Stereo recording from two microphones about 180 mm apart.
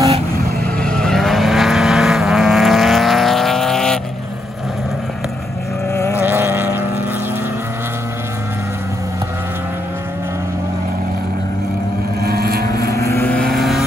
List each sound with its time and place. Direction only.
0.7 s vehicle: 5° left (ahead or behind)
5.9 s vehicle: 15° left (ahead or behind)
6.2 s vehicle: 10° right (ahead or behind)
12.2 s vehicle: 60° right (ahead or behind)
12.9 s vehicle: 15° left (ahead or behind); by 13.8 s centre (ahead or behind)